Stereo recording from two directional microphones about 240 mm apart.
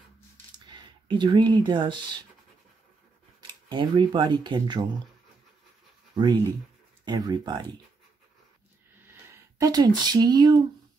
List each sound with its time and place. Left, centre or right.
0.7 s speech: centre
3.6 s speech: centre
7.1 s speech: centre
9.6 s speech: centre